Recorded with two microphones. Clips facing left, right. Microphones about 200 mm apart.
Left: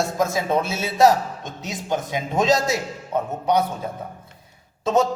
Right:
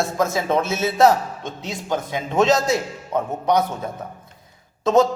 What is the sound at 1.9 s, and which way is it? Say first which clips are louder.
Speech: right 1 dB; 20° left (ahead or behind).